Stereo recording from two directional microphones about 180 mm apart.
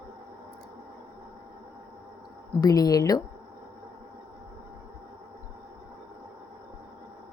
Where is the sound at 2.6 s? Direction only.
20° left (ahead or behind).